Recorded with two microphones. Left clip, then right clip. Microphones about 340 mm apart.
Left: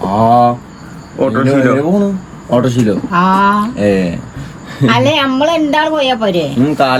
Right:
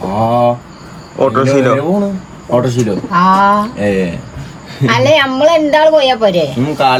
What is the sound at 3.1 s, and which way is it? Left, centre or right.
Speech, right.